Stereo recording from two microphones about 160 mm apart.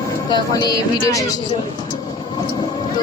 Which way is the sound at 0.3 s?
25° left (ahead or behind).